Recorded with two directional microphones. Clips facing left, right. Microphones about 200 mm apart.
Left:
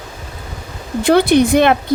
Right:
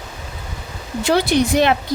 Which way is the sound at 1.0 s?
55° left (ahead or behind).